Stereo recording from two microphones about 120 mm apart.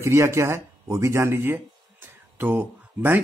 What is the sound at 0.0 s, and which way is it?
Speech, 25° right (ahead or behind).